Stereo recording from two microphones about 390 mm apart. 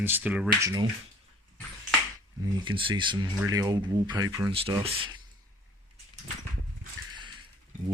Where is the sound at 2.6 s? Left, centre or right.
Centre.